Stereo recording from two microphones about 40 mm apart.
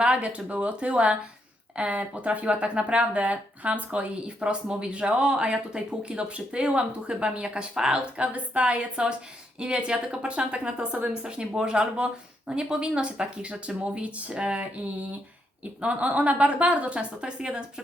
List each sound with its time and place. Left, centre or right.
0.0 s a woman's voice: right
8.0 s speech: right
15.8 s a woman's voice: right